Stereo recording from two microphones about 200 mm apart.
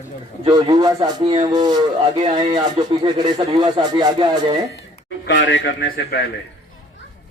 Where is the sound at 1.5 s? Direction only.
20° right (ahead or behind).